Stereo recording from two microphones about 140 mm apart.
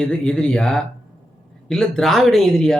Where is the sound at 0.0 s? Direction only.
5° left (ahead or behind).